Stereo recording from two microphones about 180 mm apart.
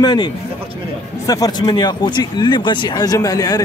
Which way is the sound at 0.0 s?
25° left (ahead or behind).